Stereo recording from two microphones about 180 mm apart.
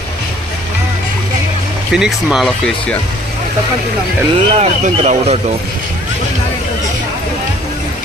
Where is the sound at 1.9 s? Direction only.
5° right (ahead or behind).